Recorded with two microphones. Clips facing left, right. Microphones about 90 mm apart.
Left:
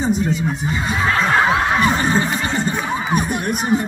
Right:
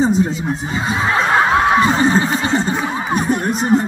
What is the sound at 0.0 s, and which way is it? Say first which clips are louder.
Speech: right 3 dB; 30° right (ahead or behind).